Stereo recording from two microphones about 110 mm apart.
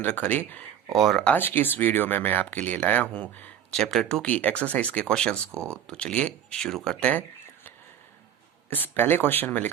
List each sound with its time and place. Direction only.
0.0 s speech: 15° left (ahead or behind)
0.9 s speech: centre (ahead or behind)
1.4 s speech: 20° left (ahead or behind)
5.5 s speech: 25° right (ahead or behind)
5.9 s speech: 10° left (ahead or behind)
8.7 s speech: 20° left (ahead or behind)